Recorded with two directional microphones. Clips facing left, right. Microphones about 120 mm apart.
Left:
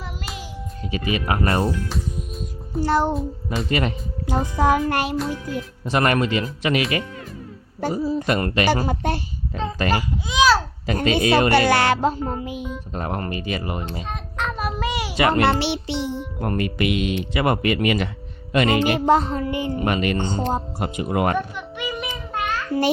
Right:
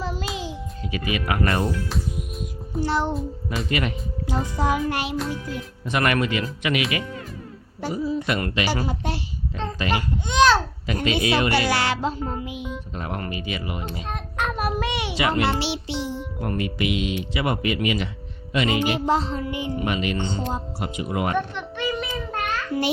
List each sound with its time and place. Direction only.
0.9 s speech: 30° left (ahead or behind)
1.9 s music: centre (ahead or behind)
2.8 s speech: 45° left (ahead or behind)
3.2 s speech: centre (ahead or behind)
3.7 s speech: 35° left (ahead or behind)
4.3 s speech: 50° left (ahead or behind)
5.8 s speech: 30° left (ahead or behind); by 9.2 s 50° left (ahead or behind)
9.9 s speech: 5° left (ahead or behind)
10.8 s speech: 40° left (ahead or behind)
14.1 s child singing: 5° right (ahead or behind)
15.1 s a child's voice: 50° left (ahead or behind)
16.4 s speech: 50° left (ahead or behind)
21.3 s a child's voice: 10° left (ahead or behind)